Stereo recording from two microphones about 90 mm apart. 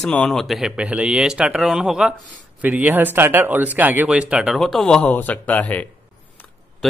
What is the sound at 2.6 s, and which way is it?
Speech, 15° right (ahead or behind).